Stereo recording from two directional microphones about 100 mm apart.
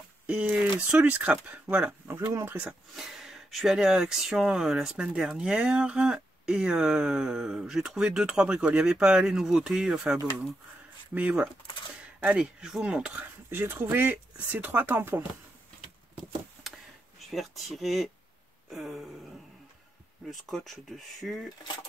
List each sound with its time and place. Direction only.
0.3 s speech: 15° right (ahead or behind)
11.1 s speech: 15° right (ahead or behind)
17.3 s speech: centre (ahead or behind)
20.2 s speech: centre (ahead or behind)